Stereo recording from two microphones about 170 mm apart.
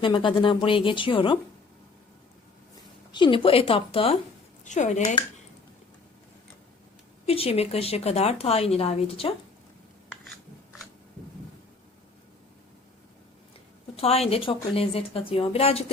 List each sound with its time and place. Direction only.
0.0 s speech: 30° left (ahead or behind)
3.1 s speech: 30° left (ahead or behind)
4.6 s speech: 45° left (ahead or behind)
7.3 s speech: 35° left (ahead or behind)
10.1 s a sound: centre (ahead or behind)
13.9 s speech: 35° left (ahead or behind)